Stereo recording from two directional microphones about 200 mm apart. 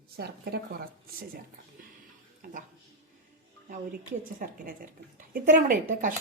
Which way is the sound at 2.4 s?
45° right (ahead or behind).